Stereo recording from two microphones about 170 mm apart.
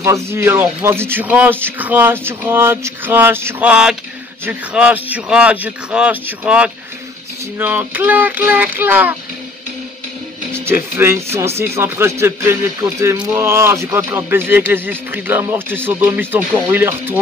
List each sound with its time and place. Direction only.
0.0 s speech: 15° right (ahead or behind)
10.5 s speech: 15° right (ahead or behind)